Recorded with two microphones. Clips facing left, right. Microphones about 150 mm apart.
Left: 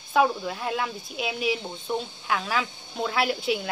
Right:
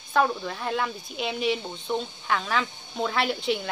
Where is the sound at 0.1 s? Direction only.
5° left (ahead or behind).